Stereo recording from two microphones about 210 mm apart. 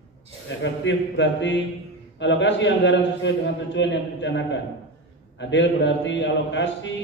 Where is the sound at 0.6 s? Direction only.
60° left (ahead or behind).